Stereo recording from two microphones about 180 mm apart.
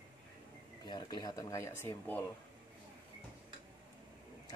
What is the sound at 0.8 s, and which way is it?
Speech, 25° left (ahead or behind).